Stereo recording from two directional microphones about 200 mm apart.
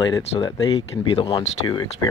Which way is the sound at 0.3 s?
25° left (ahead or behind).